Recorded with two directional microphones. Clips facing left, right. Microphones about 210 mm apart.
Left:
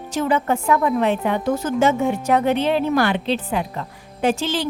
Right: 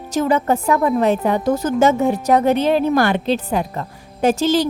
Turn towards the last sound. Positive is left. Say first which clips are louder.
# right 5 dB
turn(degrees=-40)  # may be behind; listen again after turning